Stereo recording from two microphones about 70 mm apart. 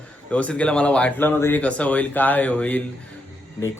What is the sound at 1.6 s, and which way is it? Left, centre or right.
Speech, centre.